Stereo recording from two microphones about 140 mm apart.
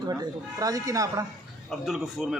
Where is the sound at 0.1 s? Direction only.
25° right (ahead or behind).